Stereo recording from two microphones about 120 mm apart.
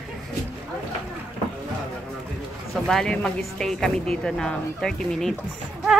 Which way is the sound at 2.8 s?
5° left (ahead or behind).